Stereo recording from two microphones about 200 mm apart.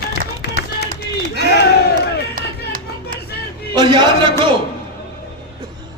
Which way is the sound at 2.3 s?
45° right (ahead or behind).